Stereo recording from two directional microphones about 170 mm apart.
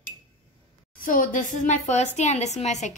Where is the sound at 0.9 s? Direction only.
55° left (ahead or behind).